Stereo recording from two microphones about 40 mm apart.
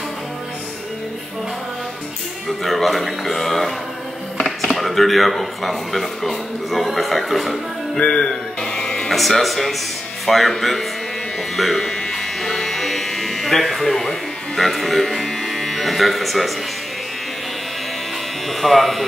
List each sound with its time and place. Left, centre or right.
2.6 s speech: centre
8.0 s music: left
8.7 s music: centre
9.1 s speech: centre
11.5 s electric shaver: centre
14.6 s speech: centre
18.5 s speech: centre